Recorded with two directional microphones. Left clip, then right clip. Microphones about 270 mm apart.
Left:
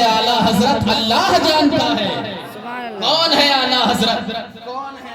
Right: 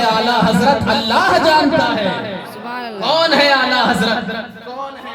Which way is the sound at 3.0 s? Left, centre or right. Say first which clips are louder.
Right 1 dB; right.